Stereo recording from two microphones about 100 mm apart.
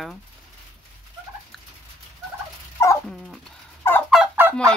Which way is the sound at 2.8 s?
25° left (ahead or behind).